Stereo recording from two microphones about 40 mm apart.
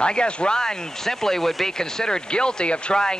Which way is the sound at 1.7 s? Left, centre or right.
Centre.